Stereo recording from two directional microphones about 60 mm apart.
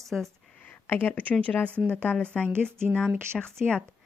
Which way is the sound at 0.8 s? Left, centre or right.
Left.